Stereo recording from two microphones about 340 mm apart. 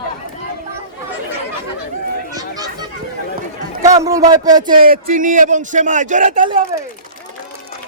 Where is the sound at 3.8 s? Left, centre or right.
Centre.